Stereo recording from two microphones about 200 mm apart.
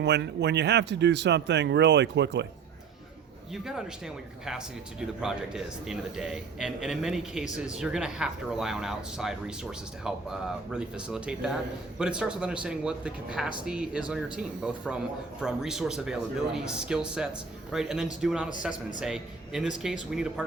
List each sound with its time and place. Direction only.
0.0 s speech: 60° right (ahead or behind)
3.5 s speech: centre (ahead or behind)